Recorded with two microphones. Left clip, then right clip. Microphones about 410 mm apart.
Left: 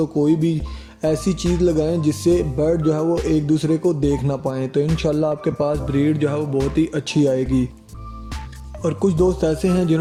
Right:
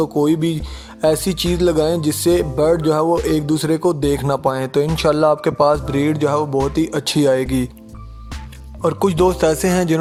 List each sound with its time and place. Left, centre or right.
0.0 s speech: centre
8.8 s speech: centre